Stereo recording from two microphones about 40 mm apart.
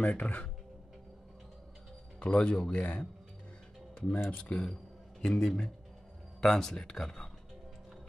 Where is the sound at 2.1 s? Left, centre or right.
Left.